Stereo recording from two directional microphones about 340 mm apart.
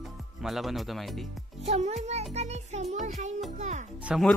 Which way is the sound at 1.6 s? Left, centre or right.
Centre.